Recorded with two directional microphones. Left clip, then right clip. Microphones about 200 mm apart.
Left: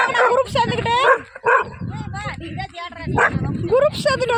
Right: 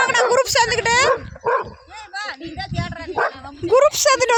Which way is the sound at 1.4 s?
5° left (ahead or behind).